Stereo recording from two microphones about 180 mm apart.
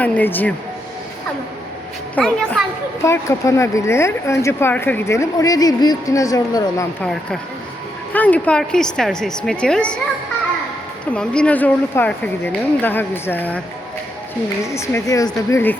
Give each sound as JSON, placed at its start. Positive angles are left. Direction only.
{"t": 0.0, "sound": "speech", "side_deg": 10}
{"t": 2.1, "sound": "speech", "side_deg": 5}
{"t": 3.0, "sound": "speech", "side_deg": 15}
{"t": 7.0, "sound": "speech", "side_deg": 5}
{"t": 11.0, "sound": "speech", "side_deg": 5}
{"t": 14.6, "sound": "speech", "side_deg": 15}